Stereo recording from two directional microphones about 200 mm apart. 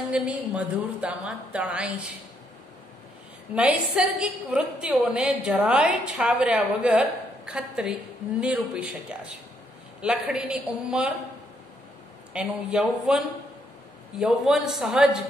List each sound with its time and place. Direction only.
0.1 s a woman's voice: 5° right (ahead or behind)
3.5 s a woman's voice: 5° right (ahead or behind)
12.3 s a woman's voice: 5° right (ahead or behind)